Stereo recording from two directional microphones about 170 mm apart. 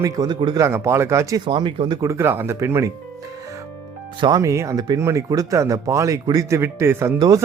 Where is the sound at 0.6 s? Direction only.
15° right (ahead or behind).